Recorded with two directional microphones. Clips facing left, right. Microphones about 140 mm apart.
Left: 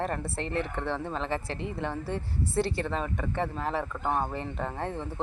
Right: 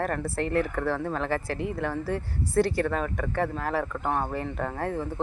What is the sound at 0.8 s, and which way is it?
Speech, centre (ahead or behind).